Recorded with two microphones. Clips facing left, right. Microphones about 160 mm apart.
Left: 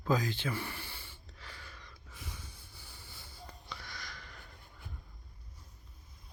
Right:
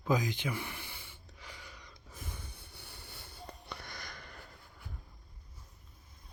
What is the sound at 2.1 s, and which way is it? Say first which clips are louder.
Snort: right 2 dB; 50° right (ahead or behind).